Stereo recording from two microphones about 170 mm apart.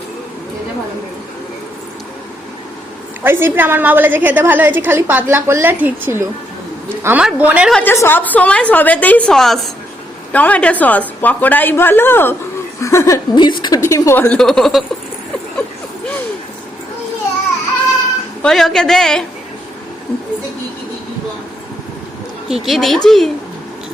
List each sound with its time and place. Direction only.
3.2 s a woman's voice: 10° right (ahead or behind)
7.7 s a woman's voice: 10° left (ahead or behind)
18.4 s a man's voice: centre (ahead or behind)
22.4 s a man's voice: centre (ahead or behind)